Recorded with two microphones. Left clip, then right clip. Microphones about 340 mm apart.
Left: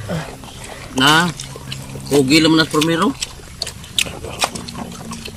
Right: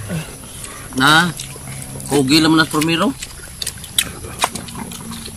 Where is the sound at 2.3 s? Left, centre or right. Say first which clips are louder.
Right 1 dB; centre.